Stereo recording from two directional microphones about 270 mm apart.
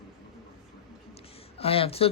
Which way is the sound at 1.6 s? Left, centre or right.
Left.